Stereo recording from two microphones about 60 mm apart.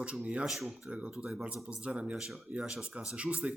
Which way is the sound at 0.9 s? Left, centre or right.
Right.